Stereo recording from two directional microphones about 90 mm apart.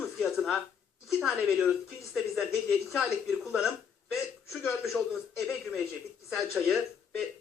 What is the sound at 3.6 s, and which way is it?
Hiccup, 5° right (ahead or behind).